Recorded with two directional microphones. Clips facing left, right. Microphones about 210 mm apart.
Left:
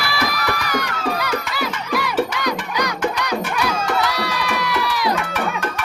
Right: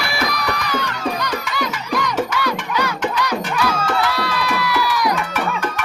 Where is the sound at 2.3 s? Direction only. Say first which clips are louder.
Right 1 dB; 15° left (ahead or behind).